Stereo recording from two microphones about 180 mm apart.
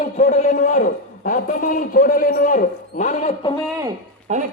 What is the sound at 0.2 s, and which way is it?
A man's voice, 45° left (ahead or behind).